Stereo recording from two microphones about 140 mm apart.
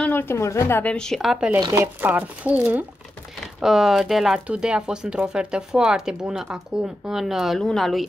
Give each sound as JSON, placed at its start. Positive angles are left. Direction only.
{"t": 0.0, "sound": "a woman's voice", "side_deg": 15}
{"t": 1.6, "sound": "speech", "side_deg": -20}